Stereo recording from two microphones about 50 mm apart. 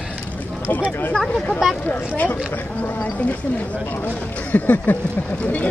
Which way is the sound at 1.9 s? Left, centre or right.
Left.